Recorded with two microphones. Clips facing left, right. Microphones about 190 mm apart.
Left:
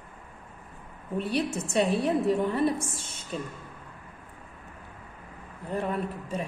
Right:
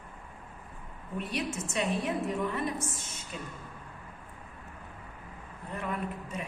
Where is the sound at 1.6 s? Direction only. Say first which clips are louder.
Left 6 dB; 35° left (ahead or behind).